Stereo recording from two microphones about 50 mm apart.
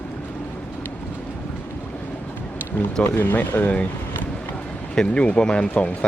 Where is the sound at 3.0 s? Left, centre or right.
Left.